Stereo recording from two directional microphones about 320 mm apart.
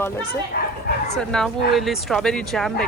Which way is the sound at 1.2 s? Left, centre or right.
Centre.